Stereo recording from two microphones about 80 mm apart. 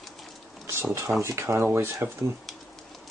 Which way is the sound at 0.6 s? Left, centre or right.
Right.